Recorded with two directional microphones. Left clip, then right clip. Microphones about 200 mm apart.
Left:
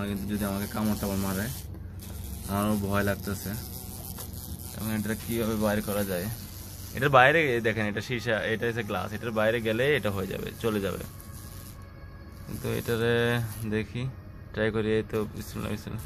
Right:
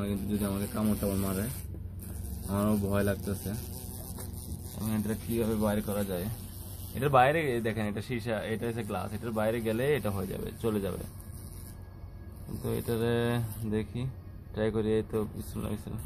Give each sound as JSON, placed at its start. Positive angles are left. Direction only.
{"t": 0.0, "sound": "speech", "side_deg": 5}
{"t": 2.5, "sound": "speech", "side_deg": 0}
{"t": 4.8, "sound": "speech", "side_deg": 0}
{"t": 12.6, "sound": "speech", "side_deg": -5}